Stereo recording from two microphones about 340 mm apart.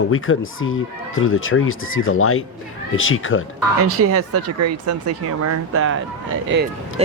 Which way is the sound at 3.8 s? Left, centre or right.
Right.